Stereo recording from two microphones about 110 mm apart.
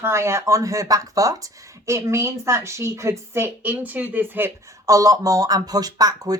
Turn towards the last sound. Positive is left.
turn(degrees=-35)  # may be behind; listen again after turning